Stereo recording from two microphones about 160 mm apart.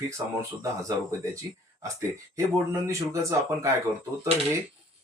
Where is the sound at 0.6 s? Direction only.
20° right (ahead or behind).